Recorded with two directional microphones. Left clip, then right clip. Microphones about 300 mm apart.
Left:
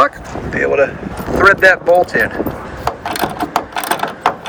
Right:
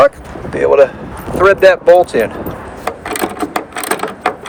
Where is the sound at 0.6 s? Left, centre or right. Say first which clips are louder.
Right 5 dB; right.